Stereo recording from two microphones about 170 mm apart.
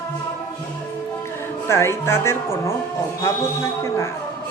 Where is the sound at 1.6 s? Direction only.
15° left (ahead or behind).